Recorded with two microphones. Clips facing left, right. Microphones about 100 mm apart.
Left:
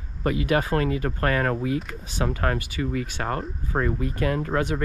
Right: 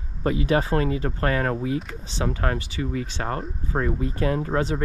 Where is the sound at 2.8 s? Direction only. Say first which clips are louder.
Left 1 dB; 65° left (ahead or behind).